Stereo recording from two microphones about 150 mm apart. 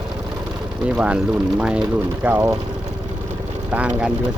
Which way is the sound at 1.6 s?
5° right (ahead or behind).